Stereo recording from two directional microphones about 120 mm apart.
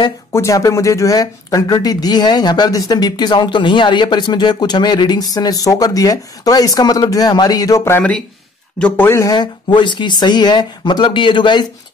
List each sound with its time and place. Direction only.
0.3 s speech: 25° left (ahead or behind)
8.7 s speech: 10° left (ahead or behind)
9.2 s speech: 35° left (ahead or behind)